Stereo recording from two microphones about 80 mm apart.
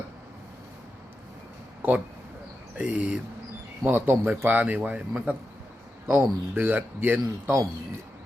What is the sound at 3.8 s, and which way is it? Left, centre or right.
Speech, right.